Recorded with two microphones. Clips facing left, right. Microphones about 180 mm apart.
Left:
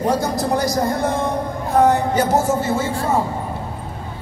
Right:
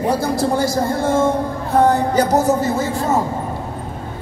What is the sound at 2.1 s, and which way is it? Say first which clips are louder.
Speech: right 2 dB; 40° right (ahead or behind).